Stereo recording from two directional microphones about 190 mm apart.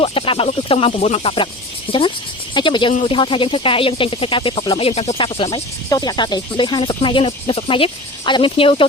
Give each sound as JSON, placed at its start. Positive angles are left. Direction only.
{"t": 0.0, "sound": "speech", "side_deg": 30}